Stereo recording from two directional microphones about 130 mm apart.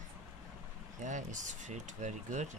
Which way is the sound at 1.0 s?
75° right (ahead or behind).